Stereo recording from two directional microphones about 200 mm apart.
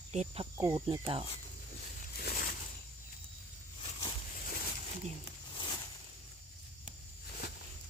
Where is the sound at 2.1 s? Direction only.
50° left (ahead or behind).